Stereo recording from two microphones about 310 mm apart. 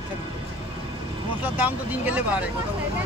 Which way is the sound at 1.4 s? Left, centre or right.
Centre.